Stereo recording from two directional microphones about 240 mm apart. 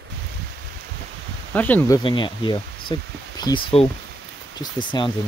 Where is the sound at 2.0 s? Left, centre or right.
Centre.